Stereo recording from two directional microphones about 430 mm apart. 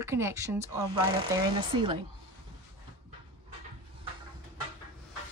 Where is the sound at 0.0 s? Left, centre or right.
Centre.